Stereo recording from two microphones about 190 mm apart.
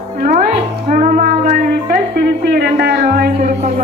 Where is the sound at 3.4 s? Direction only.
40° right (ahead or behind).